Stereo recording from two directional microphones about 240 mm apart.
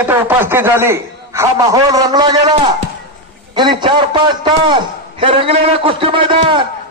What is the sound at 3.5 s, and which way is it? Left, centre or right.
A man's voice, centre.